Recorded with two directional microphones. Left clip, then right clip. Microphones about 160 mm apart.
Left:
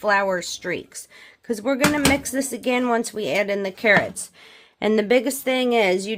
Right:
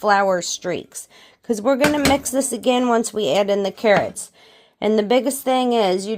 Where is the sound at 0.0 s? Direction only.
25° right (ahead or behind).